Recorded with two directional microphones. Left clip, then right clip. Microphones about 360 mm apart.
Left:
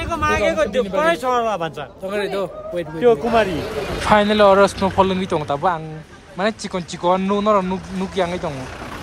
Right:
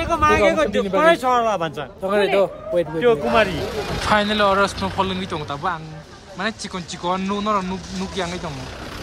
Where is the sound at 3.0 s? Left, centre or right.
Left.